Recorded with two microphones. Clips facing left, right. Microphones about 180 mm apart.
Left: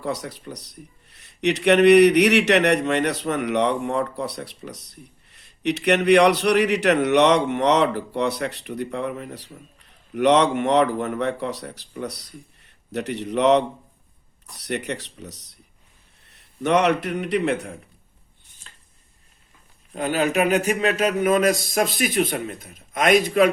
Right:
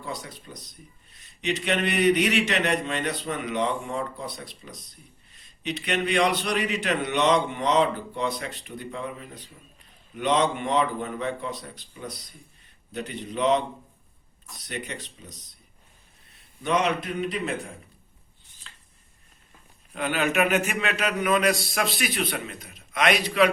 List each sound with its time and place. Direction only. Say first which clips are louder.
0.0 s a man's voice: left 8 dB; 75° left (ahead or behind)
18.6 s a sound: even; 45° left (ahead or behind)
19.9 s a man's voice: left 4 dB; 40° left (ahead or behind)